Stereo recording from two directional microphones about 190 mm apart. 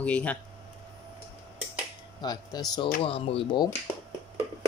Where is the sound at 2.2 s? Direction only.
20° left (ahead or behind).